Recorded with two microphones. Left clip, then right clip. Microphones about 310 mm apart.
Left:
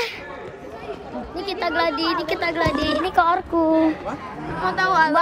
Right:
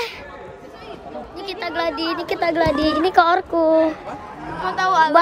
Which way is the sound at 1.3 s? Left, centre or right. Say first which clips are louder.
Left 3 dB; centre.